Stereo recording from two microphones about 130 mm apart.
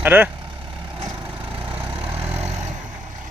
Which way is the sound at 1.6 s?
45° right (ahead or behind).